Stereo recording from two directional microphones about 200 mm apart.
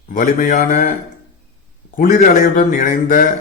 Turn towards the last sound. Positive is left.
turn(degrees=40)  # may be behind; listen again after turning